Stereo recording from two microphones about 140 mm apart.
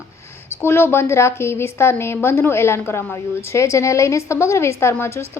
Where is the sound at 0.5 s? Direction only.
15° left (ahead or behind).